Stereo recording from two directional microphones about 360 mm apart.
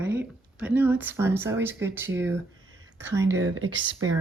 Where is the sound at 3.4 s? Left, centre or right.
Right.